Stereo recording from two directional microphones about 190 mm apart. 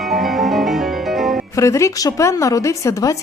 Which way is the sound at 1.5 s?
15° left (ahead or behind).